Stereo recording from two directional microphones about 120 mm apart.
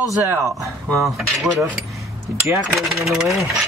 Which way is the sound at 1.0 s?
Centre (ahead or behind).